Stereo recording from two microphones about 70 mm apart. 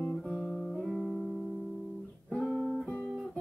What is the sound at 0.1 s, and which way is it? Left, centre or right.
Music, centre.